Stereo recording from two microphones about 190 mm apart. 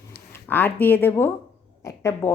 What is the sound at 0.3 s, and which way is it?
A woman's voice, 10° left (ahead or behind).